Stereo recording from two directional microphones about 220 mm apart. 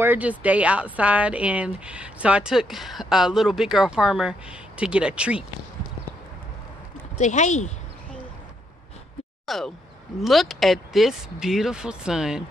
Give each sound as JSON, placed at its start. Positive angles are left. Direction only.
{"t": 0.0, "sound": "a woman's voice", "side_deg": -10}
{"t": 7.2, "sound": "speech", "side_deg": 30}
{"t": 9.5, "sound": "a woman's voice", "side_deg": 0}